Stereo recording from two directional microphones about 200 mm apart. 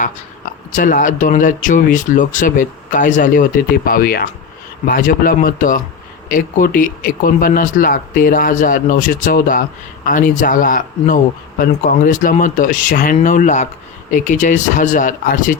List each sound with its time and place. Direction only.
0.7 s speech: 40° left (ahead or behind)